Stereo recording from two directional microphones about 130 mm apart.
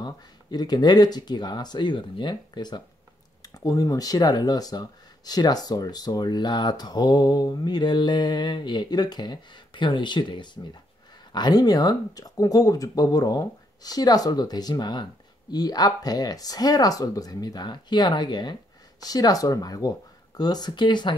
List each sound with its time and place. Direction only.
0.0 s speech: 35° left (ahead or behind)